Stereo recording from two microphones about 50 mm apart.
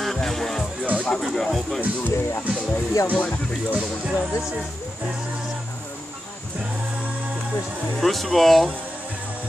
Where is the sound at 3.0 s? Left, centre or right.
Left.